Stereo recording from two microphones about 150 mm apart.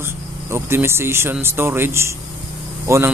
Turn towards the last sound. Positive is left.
turn(degrees=-15)  # may be behind; listen again after turning